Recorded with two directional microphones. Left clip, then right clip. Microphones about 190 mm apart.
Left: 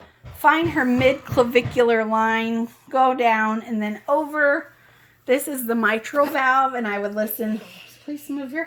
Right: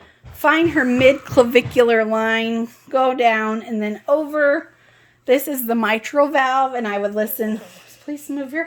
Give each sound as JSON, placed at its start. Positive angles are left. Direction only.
{"t": 0.4, "sound": "a woman's voice", "side_deg": -50}